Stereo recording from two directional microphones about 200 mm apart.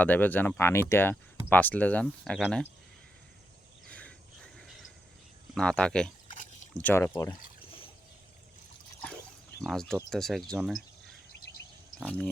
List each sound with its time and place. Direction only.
0.0 s speech: 10° left (ahead or behind)
3.8 s cricket: 5° left (ahead or behind)
5.5 s speech: 5° left (ahead or behind)
6.2 s a sound: 40° left (ahead or behind)
6.8 s speech: 10° left (ahead or behind)
7.6 s a sound: 25° left (ahead or behind)
9.6 s speech: 5° left (ahead or behind)
11.9 s speech: 5° left (ahead or behind)